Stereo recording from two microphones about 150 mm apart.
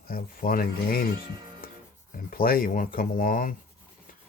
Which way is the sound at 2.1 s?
75° left (ahead or behind).